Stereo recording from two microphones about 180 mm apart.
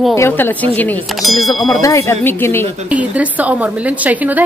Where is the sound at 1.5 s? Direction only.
20° left (ahead or behind).